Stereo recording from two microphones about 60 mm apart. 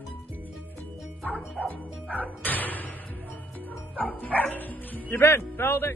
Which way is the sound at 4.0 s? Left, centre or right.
Left.